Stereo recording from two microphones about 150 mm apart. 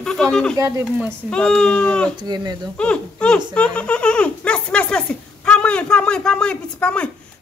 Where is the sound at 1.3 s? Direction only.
5° left (ahead or behind).